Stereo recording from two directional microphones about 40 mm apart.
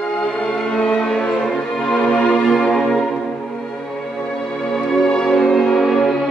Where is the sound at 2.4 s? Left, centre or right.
Centre.